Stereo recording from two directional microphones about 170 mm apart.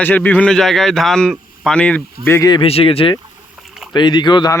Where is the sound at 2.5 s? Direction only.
35° left (ahead or behind).